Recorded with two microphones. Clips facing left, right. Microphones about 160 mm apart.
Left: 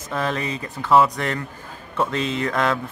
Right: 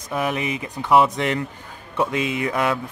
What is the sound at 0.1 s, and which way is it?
Speech, 15° right (ahead or behind).